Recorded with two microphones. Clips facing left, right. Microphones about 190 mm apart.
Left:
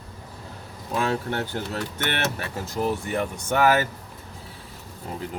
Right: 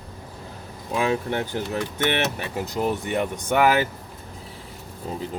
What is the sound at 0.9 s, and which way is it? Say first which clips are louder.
Speech: right 2 dB; 15° right (ahead or behind).